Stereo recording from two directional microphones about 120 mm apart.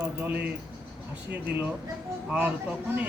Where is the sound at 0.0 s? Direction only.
15° right (ahead or behind).